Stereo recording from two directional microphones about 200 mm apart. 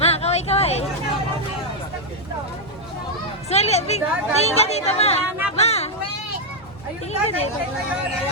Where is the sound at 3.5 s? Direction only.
30° left (ahead or behind).